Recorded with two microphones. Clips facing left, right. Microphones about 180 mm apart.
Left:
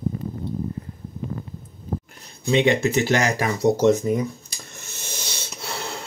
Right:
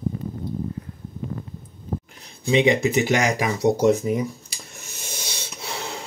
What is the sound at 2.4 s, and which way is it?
Speech, 10° right (ahead or behind).